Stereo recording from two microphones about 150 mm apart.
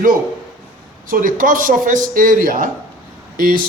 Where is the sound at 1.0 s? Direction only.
65° right (ahead or behind).